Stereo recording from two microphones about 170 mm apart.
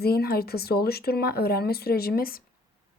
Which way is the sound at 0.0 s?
65° left (ahead or behind).